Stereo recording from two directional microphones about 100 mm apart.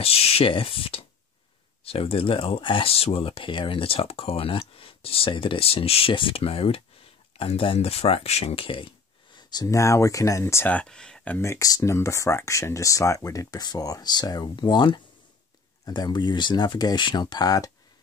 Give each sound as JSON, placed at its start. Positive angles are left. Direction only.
{"t": 0.0, "sound": "speech", "side_deg": 80}
{"t": 9.5, "sound": "speech", "side_deg": 40}
{"t": 10.7, "sound": "speech", "side_deg": 10}
{"t": 11.3, "sound": "speech", "side_deg": 30}